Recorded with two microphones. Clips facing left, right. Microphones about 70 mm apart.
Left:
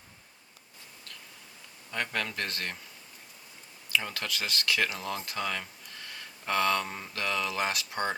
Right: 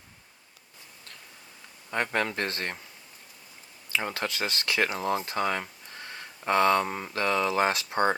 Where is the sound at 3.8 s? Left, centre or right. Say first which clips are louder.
Right 2 dB; right.